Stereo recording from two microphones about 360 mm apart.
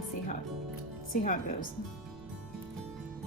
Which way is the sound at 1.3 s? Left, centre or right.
Left.